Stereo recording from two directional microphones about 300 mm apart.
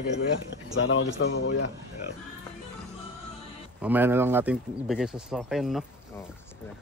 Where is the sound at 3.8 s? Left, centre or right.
Centre.